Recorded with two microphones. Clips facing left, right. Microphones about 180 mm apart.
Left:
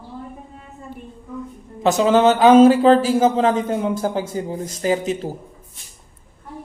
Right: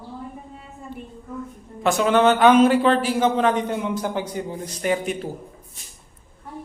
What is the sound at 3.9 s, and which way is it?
Speech, 45° left (ahead or behind).